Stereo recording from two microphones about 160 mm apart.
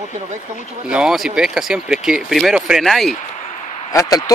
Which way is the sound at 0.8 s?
5° right (ahead or behind).